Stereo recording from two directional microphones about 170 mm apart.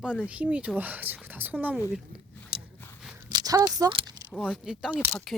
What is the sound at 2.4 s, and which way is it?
Biting, 10° left (ahead or behind).